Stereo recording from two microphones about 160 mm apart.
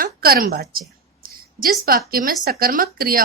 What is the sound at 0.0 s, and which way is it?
A woman's voice, 70° right (ahead or behind).